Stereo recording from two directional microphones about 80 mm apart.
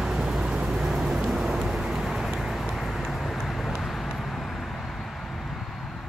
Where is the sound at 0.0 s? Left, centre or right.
Centre.